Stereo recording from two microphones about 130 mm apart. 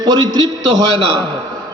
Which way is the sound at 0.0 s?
30° right (ahead or behind).